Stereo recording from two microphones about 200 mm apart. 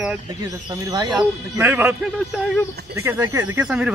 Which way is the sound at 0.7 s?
20° right (ahead or behind).